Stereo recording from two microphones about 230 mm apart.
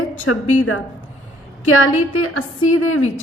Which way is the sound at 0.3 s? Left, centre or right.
Left.